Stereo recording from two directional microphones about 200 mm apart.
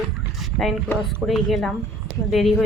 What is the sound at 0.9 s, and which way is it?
Speech, 10° left (ahead or behind).